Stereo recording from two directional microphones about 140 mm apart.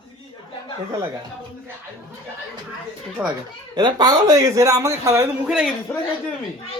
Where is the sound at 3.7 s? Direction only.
30° right (ahead or behind).